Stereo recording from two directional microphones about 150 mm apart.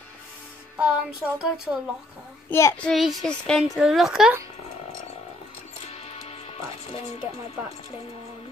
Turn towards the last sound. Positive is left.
turn(degrees=40)  # may be behind; listen again after turning